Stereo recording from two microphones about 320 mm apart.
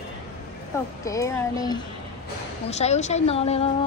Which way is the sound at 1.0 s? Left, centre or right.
Centre.